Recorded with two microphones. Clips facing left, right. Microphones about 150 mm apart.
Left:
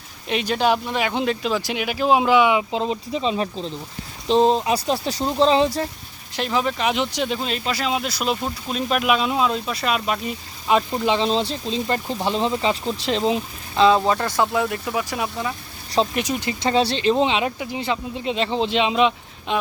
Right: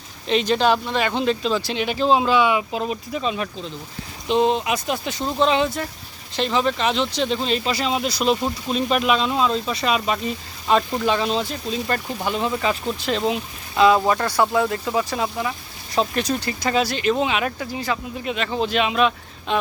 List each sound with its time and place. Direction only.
0.3 s speech: 10° left (ahead or behind); by 5.9 s 30° left (ahead or behind)
6.3 s speech: 5° left (ahead or behind)
14.7 s speech: 25° right (ahead or behind)
16.1 s speech: 15° left (ahead or behind)